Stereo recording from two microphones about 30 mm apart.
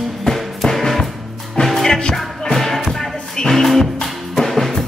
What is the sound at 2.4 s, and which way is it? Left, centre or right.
Music, centre.